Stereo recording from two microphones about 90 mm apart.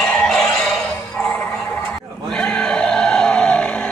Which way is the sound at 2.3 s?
10° left (ahead or behind).